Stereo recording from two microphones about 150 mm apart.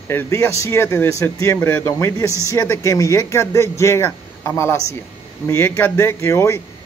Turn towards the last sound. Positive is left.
turn(degrees=20)  # may be behind; listen again after turning